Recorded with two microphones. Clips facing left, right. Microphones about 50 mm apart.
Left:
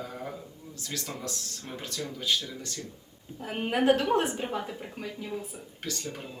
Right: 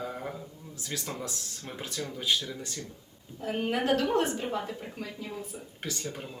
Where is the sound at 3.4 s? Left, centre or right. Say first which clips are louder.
Left 4 dB; left.